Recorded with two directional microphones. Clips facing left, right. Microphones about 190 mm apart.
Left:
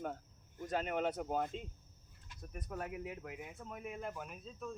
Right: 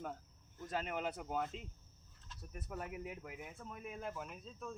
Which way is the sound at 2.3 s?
15° left (ahead or behind).